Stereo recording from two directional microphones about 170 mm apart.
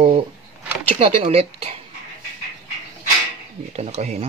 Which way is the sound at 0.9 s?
35° right (ahead or behind).